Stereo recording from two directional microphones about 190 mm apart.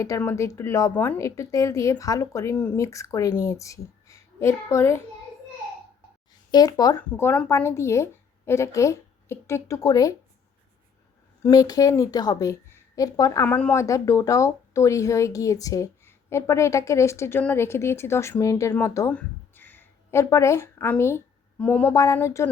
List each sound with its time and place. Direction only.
0.0 s a woman's voice: 15° left (ahead or behind)
6.5 s speech: 20° left (ahead or behind)
7.1 s a woman's voice: 10° left (ahead or behind)
11.4 s a woman's voice: 20° left (ahead or behind)